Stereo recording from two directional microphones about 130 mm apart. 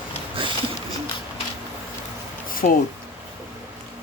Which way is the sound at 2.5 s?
90° left.